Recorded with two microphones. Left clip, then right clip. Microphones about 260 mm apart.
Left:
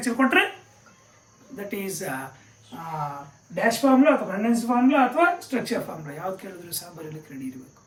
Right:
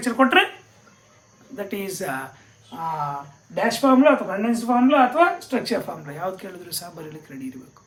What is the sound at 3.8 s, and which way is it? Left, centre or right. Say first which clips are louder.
Speech: right 4 dB; centre.